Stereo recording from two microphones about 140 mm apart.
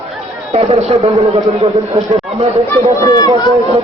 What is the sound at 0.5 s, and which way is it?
A man's voice, 45° right (ahead or behind).